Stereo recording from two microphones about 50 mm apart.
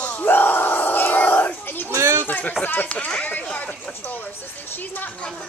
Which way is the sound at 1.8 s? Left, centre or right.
Right.